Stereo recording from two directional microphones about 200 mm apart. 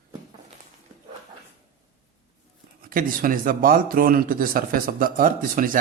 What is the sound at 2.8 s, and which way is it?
Speech, 45° right (ahead or behind).